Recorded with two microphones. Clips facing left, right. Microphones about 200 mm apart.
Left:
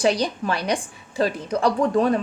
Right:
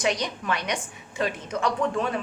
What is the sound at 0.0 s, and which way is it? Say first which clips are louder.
A woman's voice: left 6 dB; 35° left (ahead or behind).